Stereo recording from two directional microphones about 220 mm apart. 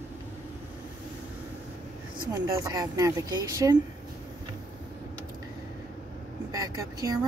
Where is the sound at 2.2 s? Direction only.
15° right (ahead or behind).